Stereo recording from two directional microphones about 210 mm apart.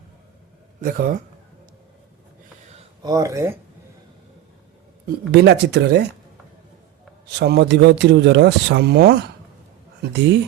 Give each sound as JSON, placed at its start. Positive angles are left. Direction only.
{"t": 0.8, "sound": "speech", "side_deg": -40}
{"t": 3.0, "sound": "speech", "side_deg": -15}
{"t": 5.3, "sound": "speech", "side_deg": -50}
{"t": 7.3, "sound": "a man's voice", "side_deg": -55}